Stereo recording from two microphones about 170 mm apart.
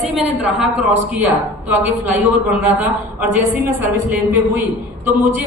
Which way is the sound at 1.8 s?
10° right (ahead or behind).